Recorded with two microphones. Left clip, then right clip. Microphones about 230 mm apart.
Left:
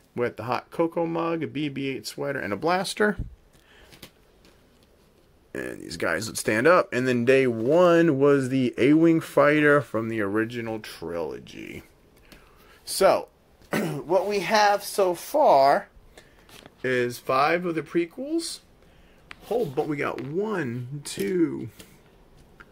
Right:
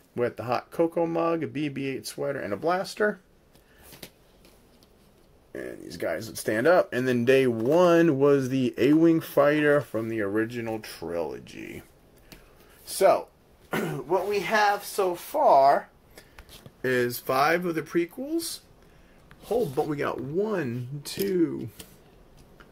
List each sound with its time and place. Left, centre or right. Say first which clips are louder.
0.1 s speech: even; centre; by 3.2 s left
5.5 s speech: left 3 dB; left; by 11.8 s centre
12.8 s speech: left 1 dB; left
13.7 s speech: left 2 dB; left
16.8 s speech: left 1 dB; centre
19.5 s speech: even; centre